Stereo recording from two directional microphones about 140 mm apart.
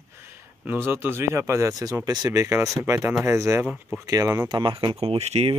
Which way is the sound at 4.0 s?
25° right (ahead or behind).